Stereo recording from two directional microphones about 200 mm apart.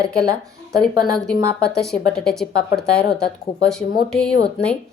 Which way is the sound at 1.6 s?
5° left (ahead or behind).